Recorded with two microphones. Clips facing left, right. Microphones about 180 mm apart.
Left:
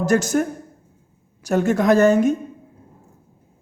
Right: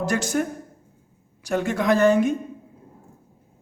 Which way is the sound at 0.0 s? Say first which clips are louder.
Left 5 dB; 45° left (ahead or behind).